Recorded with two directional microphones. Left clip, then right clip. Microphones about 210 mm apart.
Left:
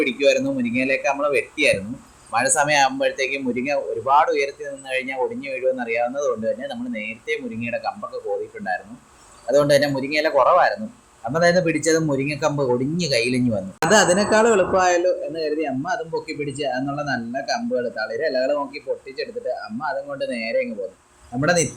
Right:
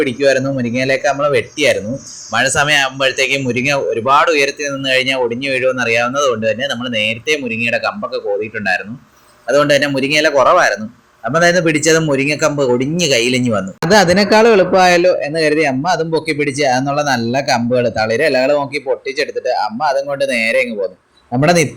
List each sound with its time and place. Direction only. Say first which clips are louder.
0.0 s speech: right 5 dB; 5° right (ahead or behind)
13.9 s a man's voice: right 6 dB; 30° right (ahead or behind)